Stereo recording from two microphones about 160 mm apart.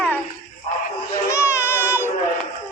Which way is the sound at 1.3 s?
15° left (ahead or behind).